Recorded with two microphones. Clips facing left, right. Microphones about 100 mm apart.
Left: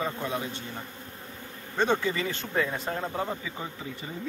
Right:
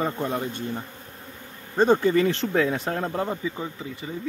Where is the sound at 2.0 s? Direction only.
55° right (ahead or behind).